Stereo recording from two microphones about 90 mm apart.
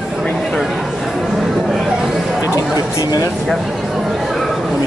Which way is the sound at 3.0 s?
45° left (ahead or behind).